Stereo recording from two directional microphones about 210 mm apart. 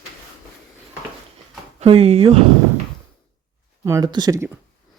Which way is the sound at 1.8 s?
30° right (ahead or behind).